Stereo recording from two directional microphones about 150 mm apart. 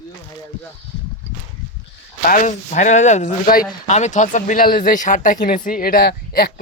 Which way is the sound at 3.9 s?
50° left (ahead or behind).